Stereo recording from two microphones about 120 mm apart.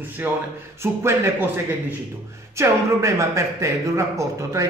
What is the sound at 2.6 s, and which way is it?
A man's voice, 25° right (ahead or behind).